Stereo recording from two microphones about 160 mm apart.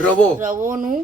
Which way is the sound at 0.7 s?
60° right (ahead or behind).